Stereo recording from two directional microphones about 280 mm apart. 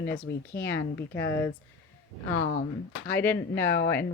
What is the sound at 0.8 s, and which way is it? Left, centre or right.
Speech, left.